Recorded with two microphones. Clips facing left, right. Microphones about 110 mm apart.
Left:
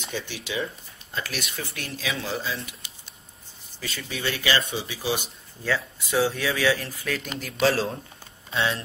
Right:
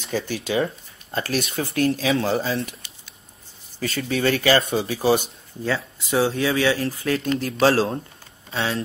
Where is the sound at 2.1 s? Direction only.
50° right (ahead or behind).